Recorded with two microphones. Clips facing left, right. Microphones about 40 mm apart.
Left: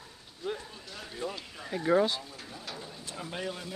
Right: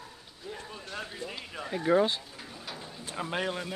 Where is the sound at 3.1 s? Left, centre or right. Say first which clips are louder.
Right 5 dB; right.